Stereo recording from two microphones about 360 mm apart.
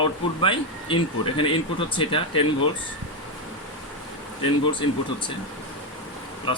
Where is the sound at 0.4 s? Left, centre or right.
Centre.